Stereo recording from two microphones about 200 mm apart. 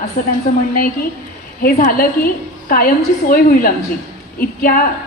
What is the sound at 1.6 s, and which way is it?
A woman's voice, 45° left (ahead or behind).